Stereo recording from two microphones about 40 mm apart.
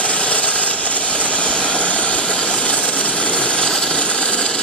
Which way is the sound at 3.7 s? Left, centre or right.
Left.